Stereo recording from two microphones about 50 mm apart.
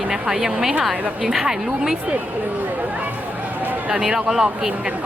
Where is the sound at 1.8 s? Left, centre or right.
Centre.